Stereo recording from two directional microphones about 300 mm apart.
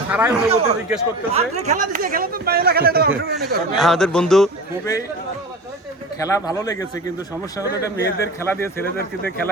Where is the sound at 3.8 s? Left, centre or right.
Centre.